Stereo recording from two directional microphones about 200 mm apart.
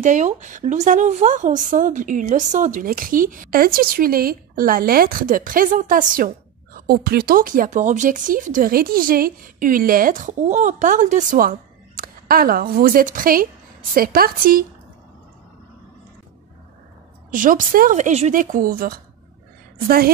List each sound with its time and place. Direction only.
0.0 s a woman's voice: 40° right (ahead or behind)
17.3 s a woman's voice: 40° right (ahead or behind)